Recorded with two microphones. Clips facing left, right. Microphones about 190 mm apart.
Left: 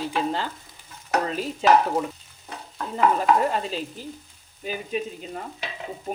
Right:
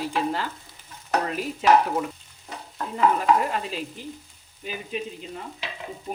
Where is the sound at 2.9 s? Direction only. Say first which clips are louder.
Even; 30° left (ahead or behind).